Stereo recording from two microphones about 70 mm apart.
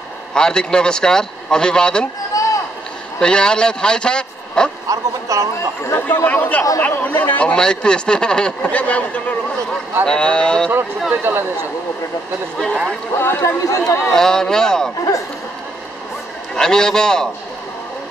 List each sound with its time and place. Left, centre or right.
0.3 s speech: centre
2.3 s rowboat: left
3.2 s speech: centre
4.8 s a woman's voice: right
6.0 s speech: left
11.3 s speech: right
13.1 s speech: left
14.1 s speech: centre
16.5 s speech: centre